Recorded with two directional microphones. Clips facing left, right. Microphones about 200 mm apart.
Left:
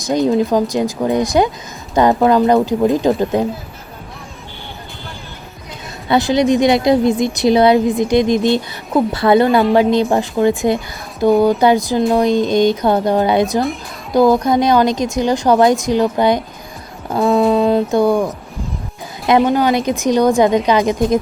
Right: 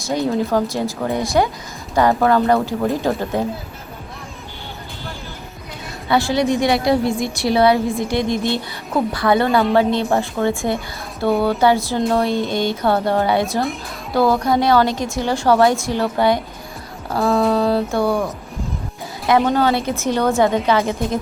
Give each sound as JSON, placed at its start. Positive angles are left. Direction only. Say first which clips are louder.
{"t": 0.0, "sound": "a woman's voice", "louder": "left 5 dB", "side_deg": 20}
{"t": 6.1, "sound": "a woman's voice", "louder": "left 4 dB", "side_deg": 20}
{"t": 17.1, "sound": "a sound", "louder": "left 4 dB", "side_deg": 20}
{"t": 17.5, "sound": "music", "louder": "left 4 dB", "side_deg": 20}
{"t": 19.5, "sound": "a woman's voice", "louder": "left 3 dB", "side_deg": 15}